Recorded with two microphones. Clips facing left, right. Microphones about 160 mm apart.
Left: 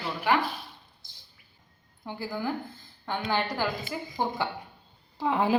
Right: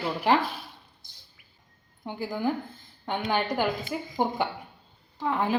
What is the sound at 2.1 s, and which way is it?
A woman's voice, 15° right (ahead or behind).